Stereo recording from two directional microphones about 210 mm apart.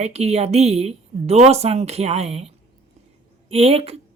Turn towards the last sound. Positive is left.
turn(degrees=-30)  # may be behind; listen again after turning